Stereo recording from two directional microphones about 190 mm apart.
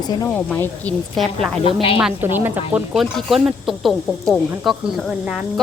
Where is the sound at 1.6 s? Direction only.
30° left (ahead or behind).